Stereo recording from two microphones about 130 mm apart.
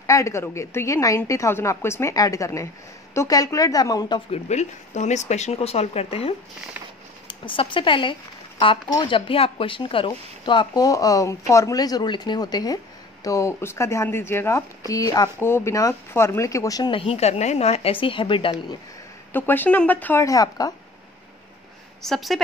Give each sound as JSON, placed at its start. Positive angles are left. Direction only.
{"t": 0.0, "sound": "speech", "side_deg": 25}
{"t": 4.3, "sound": "speech", "side_deg": 60}
{"t": 7.2, "sound": "speech", "side_deg": 40}
{"t": 14.8, "sound": "speech", "side_deg": 30}
{"t": 15.3, "sound": "speech", "side_deg": 20}
{"t": 16.9, "sound": "speech", "side_deg": 50}
{"t": 19.3, "sound": "speech", "side_deg": 15}
{"t": 20.2, "sound": "speech", "side_deg": 30}
{"t": 22.0, "sound": "a woman's voice", "side_deg": 0}